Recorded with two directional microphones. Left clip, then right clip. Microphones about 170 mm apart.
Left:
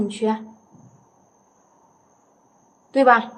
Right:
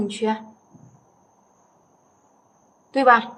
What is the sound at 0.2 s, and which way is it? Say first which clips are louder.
Speech: left 1 dB; 5° left (ahead or behind).